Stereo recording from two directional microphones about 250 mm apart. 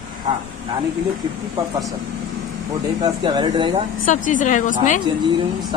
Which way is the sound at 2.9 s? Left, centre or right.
Centre.